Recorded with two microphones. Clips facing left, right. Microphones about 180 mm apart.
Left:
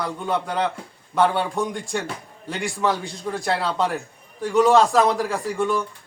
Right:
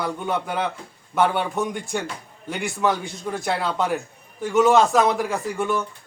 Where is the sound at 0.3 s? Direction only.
5° right (ahead or behind).